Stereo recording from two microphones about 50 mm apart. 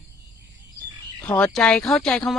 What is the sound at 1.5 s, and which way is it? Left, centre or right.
Speech, centre.